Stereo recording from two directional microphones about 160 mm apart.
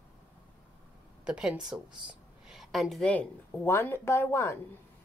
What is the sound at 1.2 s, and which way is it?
A woman's voice, 5° right (ahead or behind).